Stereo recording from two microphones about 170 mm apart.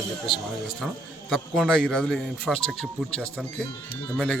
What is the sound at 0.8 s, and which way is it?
Speech, 5° right (ahead or behind).